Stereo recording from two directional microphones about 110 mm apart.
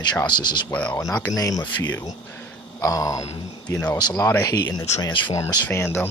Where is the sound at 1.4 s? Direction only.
35° left (ahead or behind).